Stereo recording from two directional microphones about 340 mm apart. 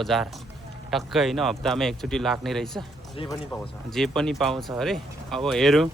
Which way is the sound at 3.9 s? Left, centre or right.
Centre.